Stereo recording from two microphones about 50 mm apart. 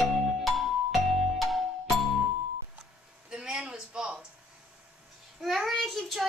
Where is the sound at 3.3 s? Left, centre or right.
Centre.